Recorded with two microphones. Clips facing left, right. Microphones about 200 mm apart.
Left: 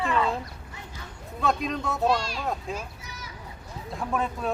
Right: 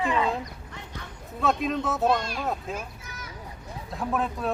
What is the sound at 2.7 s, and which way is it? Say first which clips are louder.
Vehicle: even; 55° right (ahead or behind).